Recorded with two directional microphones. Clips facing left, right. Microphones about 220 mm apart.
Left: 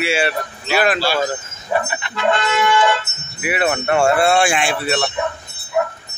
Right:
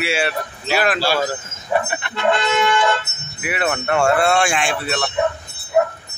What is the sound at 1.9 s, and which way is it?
Music, 55° right (ahead or behind).